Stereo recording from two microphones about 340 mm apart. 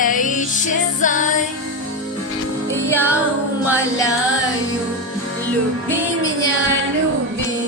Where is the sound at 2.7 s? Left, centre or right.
Centre.